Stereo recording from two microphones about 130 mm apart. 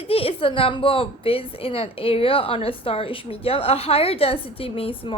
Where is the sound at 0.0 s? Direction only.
45° left (ahead or behind).